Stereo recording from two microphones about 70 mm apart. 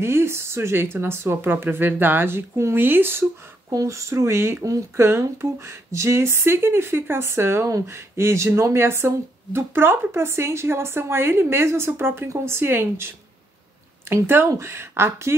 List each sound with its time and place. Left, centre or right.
0.0 s speech: right
3.7 s speech: right
7.6 s speech: right
7.9 s speech: right